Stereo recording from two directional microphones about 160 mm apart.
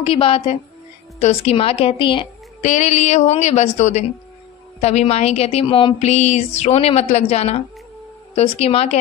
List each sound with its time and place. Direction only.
0.0 s speech: 35° left (ahead or behind)
2.6 s a woman's voice: 45° left (ahead or behind)